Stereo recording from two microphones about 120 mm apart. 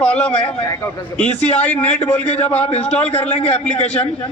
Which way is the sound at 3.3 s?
60° left (ahead or behind).